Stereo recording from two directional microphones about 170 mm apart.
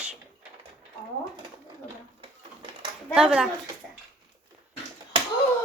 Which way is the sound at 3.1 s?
5° right (ahead or behind).